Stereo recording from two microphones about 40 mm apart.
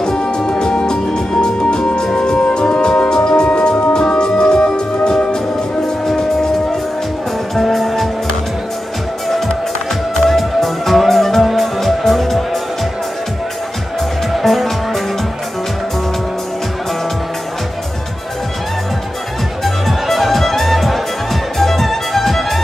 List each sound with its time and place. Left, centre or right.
0.0 s music: centre
7.5 s music: centre
10.2 s music: centre
14.3 s music: centre
19.6 s music: centre